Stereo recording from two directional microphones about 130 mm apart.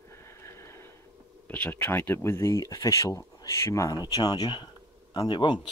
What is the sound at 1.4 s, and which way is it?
Speech, 15° left (ahead or behind).